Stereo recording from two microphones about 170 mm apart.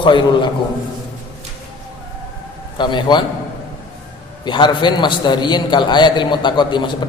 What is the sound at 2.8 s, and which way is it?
Speech, 25° left (ahead or behind).